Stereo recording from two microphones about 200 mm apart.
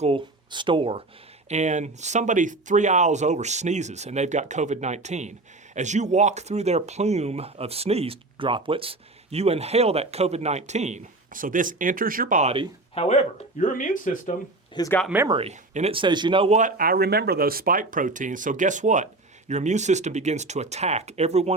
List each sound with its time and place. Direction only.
0.0 s speech: 25° right (ahead or behind)
12.9 s speech: 30° left (ahead or behind)
13.6 s speech: 40° left (ahead or behind)
14.8 s speech: 15° left (ahead or behind)
15.0 s speech: 10° right (ahead or behind)
15.3 s speech: 30° right (ahead or behind)